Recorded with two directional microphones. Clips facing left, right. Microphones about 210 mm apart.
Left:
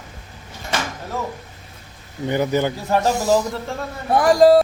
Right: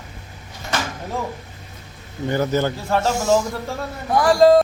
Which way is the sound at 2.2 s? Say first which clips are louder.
Left 1 dB; 15° left (ahead or behind).